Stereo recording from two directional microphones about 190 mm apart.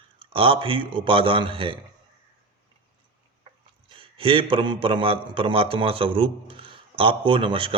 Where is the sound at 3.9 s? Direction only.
30° right (ahead or behind).